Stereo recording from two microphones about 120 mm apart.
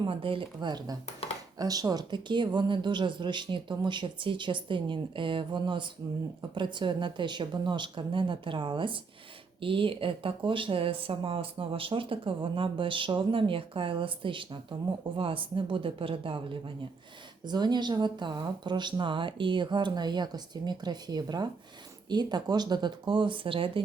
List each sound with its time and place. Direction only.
0.0 s a woman's voice: 50° right (ahead or behind)
1.2 s a sound: 55° left (ahead or behind)
1.5 s a woman's voice: 30° right (ahead or behind); by 16.6 s 45° right (ahead or behind)
17.4 s a woman's voice: 35° right (ahead or behind)